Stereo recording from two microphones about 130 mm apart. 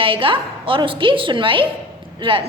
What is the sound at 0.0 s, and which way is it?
A woman's voice, 45° right (ahead or behind).